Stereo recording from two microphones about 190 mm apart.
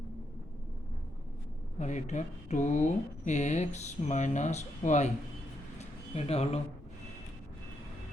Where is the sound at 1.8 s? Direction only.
40° left (ahead or behind).